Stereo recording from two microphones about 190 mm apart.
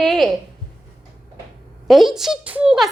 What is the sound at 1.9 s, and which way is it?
A woman's voice, centre (ahead or behind).